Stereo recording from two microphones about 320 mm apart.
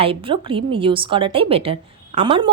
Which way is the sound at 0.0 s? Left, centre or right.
Centre.